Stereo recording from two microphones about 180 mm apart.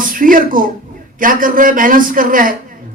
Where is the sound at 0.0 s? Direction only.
50° right (ahead or behind).